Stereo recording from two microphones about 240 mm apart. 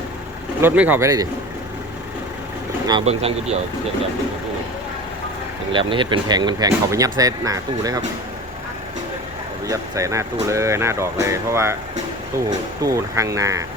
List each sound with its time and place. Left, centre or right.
0.6 s speech: centre
2.8 s speech: right
5.7 s speech: centre
9.6 s speech: centre
12.8 s speech: centre